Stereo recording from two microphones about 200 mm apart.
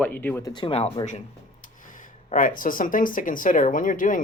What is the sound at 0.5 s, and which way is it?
Speech, 25° left (ahead or behind).